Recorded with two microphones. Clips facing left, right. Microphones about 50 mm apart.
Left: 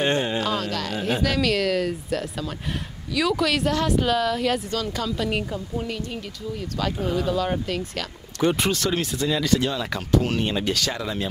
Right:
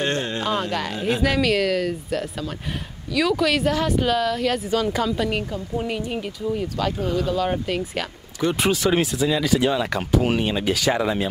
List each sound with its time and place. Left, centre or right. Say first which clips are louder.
0.0 s music: left 2 dB; centre
0.4 s speech: right 2 dB; centre
4.6 s speech: right 5 dB; centre
6.8 s speech: left 1 dB; centre
10.9 s speech: right 8 dB; right